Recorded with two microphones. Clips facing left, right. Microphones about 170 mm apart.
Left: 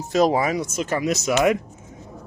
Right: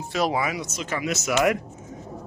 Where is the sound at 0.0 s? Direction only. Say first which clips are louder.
Left 6 dB; 40° left (ahead or behind).